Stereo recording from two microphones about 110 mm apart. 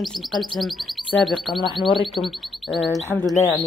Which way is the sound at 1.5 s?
50° left (ahead or behind).